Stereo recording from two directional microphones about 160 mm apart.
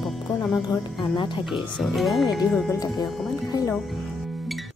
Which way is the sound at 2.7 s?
25° left (ahead or behind).